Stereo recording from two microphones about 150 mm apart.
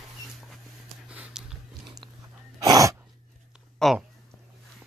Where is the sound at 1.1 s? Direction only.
5° right (ahead or behind).